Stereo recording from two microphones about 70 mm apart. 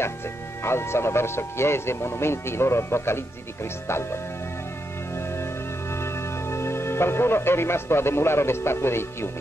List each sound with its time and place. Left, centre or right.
0.7 s speech: left
5.4 s music: left